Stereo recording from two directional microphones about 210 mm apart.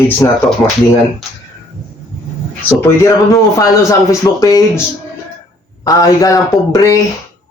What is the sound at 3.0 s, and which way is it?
Speech, 15° left (ahead or behind).